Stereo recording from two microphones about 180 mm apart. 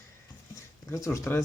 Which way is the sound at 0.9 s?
15° left (ahead or behind).